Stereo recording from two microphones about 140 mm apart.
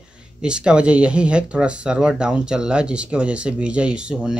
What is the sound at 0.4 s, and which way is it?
Speech, 5° right (ahead or behind).